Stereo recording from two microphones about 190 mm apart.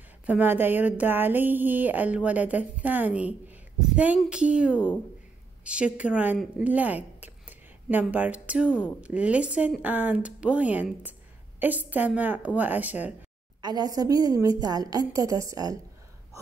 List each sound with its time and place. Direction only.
0.3 s a woman's voice: 10° right (ahead or behind)
4.7 s speech: 10° left (ahead or behind)
5.6 s a woman's voice: 5° right (ahead or behind)
13.6 s a woman's voice: 20° right (ahead or behind)